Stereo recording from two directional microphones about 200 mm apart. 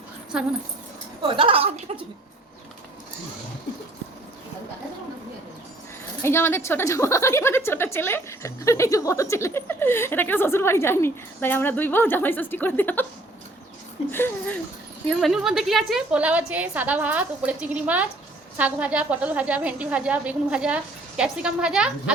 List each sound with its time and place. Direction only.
0.3 s speech: 5° right (ahead or behind)
1.3 s a woman's voice: 25° right (ahead or behind)
6.2 s a woman's voice: 10° left (ahead or behind)
14.1 s a woman's voice: 10° left (ahead or behind)
15.2 s a woman's voice: centre (ahead or behind)